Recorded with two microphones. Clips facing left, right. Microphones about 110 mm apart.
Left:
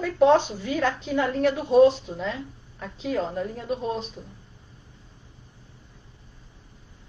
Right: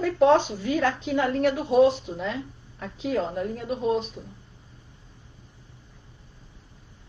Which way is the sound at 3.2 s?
15° right (ahead or behind).